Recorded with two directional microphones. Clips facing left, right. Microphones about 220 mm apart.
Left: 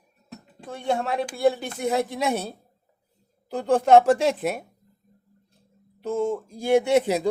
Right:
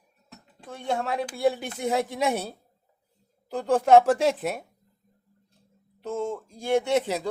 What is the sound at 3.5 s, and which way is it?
Speech, 5° right (ahead or behind).